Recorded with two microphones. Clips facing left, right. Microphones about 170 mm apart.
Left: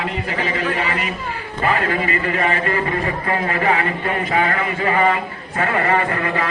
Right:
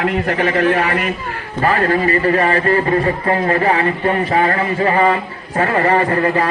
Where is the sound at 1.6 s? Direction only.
40° right (ahead or behind).